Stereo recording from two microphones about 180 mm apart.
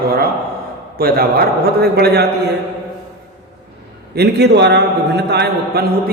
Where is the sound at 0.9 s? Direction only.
55° right (ahead or behind).